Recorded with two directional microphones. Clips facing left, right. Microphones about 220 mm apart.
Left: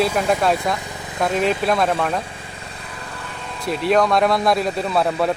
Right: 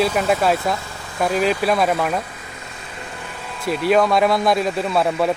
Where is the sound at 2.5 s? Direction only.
35° left (ahead or behind).